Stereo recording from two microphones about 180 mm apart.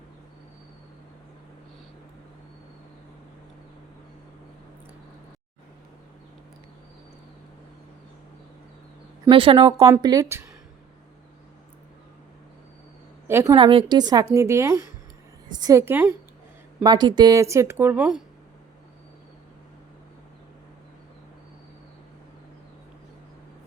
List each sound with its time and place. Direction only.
9.3 s a woman's voice: 30° right (ahead or behind)
13.2 s a woman's voice: 15° right (ahead or behind)
16.8 s speech: 25° right (ahead or behind); by 18.2 s 5° right (ahead or behind)